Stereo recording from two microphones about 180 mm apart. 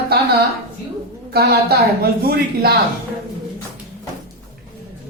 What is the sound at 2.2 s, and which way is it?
Speech, 60° right (ahead or behind).